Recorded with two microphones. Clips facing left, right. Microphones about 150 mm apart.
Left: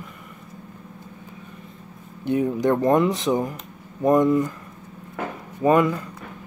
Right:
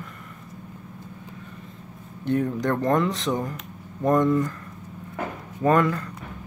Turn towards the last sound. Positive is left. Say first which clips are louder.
# left 2 dB
turn(degrees=10)  # may be behind; listen again after turning